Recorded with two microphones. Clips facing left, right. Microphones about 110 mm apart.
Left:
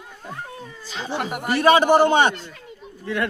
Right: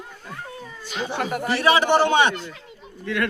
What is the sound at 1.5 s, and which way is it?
Speech, 45° left (ahead or behind).